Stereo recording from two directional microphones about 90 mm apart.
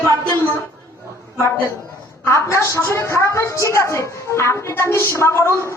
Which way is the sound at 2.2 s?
30° left (ahead or behind).